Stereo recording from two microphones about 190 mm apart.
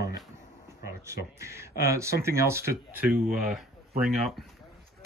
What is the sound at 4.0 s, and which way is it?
Speech, centre (ahead or behind).